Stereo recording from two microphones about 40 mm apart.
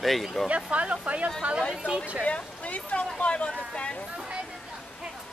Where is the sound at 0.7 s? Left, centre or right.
Right.